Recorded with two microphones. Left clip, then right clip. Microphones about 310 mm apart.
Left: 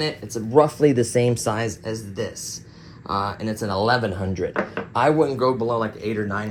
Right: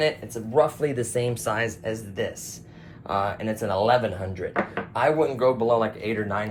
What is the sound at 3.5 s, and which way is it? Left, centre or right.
Speech, centre.